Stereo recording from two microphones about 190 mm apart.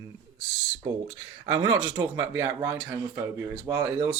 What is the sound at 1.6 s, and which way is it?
Speech, 90° right.